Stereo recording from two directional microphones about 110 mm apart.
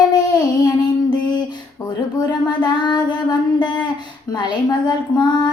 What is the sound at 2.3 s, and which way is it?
Child singing, 40° left (ahead or behind).